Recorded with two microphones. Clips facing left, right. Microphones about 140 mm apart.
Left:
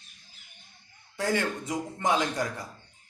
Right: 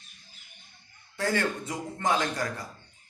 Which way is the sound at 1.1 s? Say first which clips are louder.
Even; 15° left (ahead or behind).